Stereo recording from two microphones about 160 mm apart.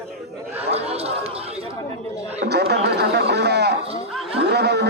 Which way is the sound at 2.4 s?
90° right.